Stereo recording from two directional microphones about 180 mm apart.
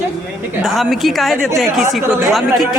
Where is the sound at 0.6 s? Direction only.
Centre (ahead or behind).